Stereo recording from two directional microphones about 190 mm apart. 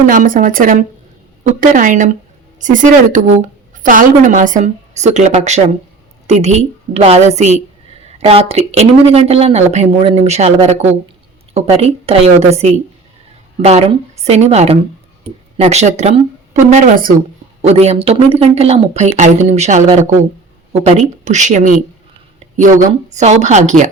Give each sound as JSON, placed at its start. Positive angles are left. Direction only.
{"t": 0.0, "sound": "speech", "side_deg": -45}
{"t": 16.7, "sound": "speech", "side_deg": -45}
{"t": 17.6, "sound": "speech", "side_deg": -35}
{"t": 21.2, "sound": "speech", "side_deg": -40}
{"t": 22.7, "sound": "a woman's voice", "side_deg": -15}
{"t": 23.1, "sound": "speech", "side_deg": -35}